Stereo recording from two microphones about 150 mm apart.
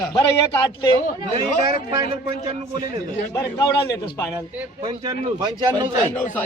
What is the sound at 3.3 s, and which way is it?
Speech, 20° left (ahead or behind).